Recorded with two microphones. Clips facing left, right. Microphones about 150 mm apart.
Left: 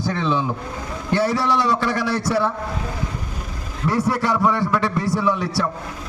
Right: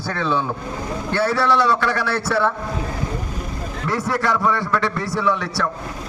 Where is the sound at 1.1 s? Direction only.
15° left (ahead or behind).